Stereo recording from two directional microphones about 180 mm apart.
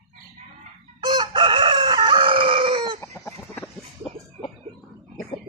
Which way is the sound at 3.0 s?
15° left (ahead or behind).